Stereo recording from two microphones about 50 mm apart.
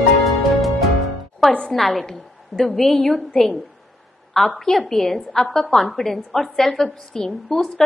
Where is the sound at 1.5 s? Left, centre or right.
Centre.